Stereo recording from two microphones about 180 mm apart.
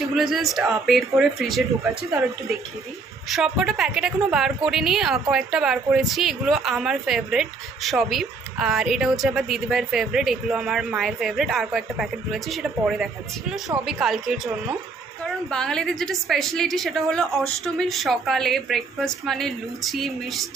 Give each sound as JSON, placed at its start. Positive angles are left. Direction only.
{"t": 0.1, "sound": "a woman's voice", "side_deg": 0}
{"t": 3.3, "sound": "a woman's voice", "side_deg": 0}